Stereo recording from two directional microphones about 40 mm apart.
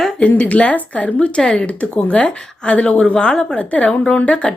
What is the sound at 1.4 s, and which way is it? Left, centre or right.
Speech, left.